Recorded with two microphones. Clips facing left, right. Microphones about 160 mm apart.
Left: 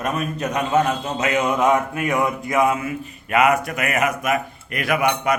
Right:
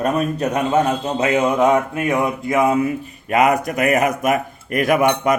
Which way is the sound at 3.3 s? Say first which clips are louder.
Right 2 dB; 35° right (ahead or behind).